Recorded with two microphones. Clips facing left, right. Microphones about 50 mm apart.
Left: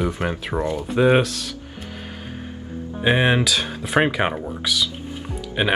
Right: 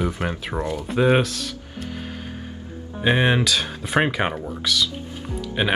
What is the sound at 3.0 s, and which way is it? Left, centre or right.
Speech, centre.